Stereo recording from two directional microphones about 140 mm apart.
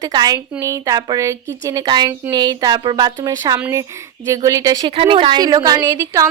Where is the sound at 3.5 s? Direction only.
15° right (ahead or behind).